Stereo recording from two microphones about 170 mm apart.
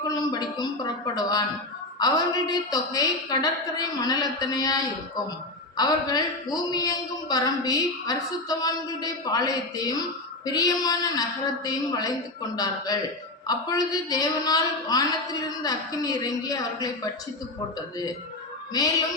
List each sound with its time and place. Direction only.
0.1 s a woman's voice: 20° left (ahead or behind)